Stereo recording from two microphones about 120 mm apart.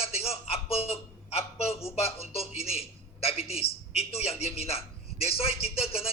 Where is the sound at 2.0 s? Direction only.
55° left (ahead or behind).